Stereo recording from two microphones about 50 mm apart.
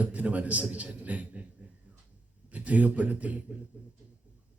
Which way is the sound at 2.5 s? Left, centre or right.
Right.